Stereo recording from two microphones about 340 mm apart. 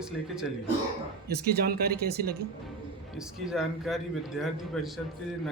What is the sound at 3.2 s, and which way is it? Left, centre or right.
A man's voice, centre.